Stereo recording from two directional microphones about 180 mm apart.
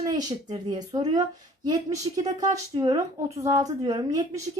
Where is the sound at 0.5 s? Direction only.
20° right (ahead or behind).